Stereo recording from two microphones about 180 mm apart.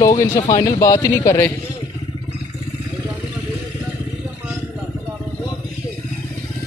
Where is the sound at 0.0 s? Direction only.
20° left (ahead or behind).